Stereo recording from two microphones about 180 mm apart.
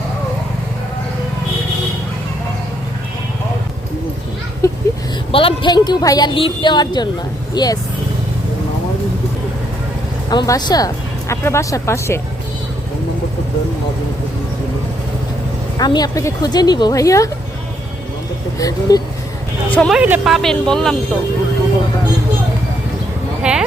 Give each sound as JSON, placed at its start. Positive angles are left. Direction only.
{"t": 4.6, "sound": "a sound", "side_deg": 20}
{"t": 5.3, "sound": "a woman's voice", "side_deg": 30}
{"t": 10.2, "sound": "speech", "side_deg": 20}
{"t": 15.8, "sound": "a woman's voice", "side_deg": 20}
{"t": 18.6, "sound": "a woman's voice", "side_deg": 20}
{"t": 19.7, "sound": "speech", "side_deg": 5}
{"t": 20.0, "sound": "speech", "side_deg": -10}
{"t": 23.4, "sound": "a sound", "side_deg": -5}